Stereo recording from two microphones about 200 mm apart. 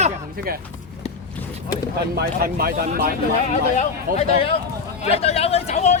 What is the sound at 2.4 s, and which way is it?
Speech, 50° right (ahead or behind).